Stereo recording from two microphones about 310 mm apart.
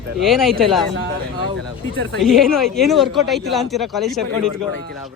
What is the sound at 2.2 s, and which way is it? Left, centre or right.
Speech, centre.